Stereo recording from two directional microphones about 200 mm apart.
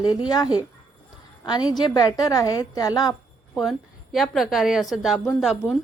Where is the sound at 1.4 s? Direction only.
20° left (ahead or behind).